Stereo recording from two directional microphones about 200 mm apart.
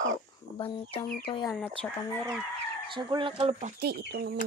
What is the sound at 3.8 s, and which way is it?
Speech, 55° right (ahead or behind).